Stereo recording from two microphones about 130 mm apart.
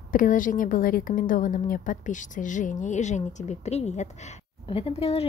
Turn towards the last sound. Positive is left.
turn(degrees=50)  # may be behind; listen again after turning